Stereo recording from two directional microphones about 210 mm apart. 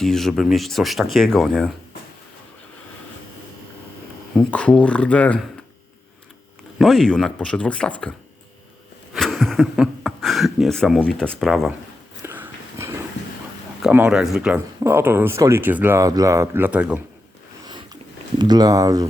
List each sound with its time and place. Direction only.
0.0 s speech: centre (ahead or behind)
4.4 s speech: 5° left (ahead or behind)
6.7 s speech: centre (ahead or behind)
9.1 s speech: centre (ahead or behind)
12.2 s dog: 10° right (ahead or behind)
13.8 s speech: 5° right (ahead or behind)
18.3 s speech: 20° right (ahead or behind)